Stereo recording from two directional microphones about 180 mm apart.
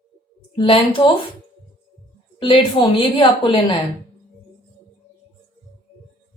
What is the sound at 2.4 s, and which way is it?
A woman's voice, 25° left (ahead or behind).